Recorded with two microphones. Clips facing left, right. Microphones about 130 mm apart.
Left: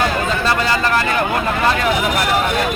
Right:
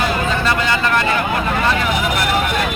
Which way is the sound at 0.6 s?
35° left (ahead or behind).